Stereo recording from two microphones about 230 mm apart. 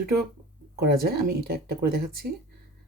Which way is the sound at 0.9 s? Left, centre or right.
Right.